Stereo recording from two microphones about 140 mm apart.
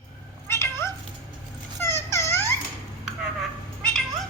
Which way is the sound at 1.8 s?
20° left (ahead or behind).